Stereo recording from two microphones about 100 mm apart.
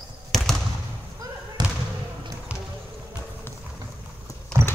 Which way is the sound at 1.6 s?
45° right (ahead or behind).